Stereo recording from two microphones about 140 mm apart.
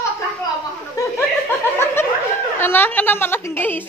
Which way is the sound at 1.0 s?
25° left (ahead or behind).